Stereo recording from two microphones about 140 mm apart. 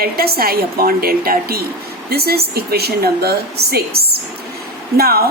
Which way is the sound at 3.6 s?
90° right.